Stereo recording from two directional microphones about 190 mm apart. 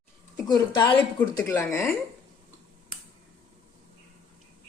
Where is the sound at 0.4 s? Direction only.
20° left (ahead or behind).